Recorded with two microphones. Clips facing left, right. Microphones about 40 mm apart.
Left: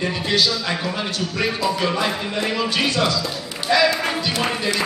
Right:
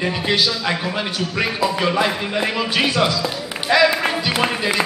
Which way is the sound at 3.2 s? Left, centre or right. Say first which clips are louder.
Right 2 dB; centre.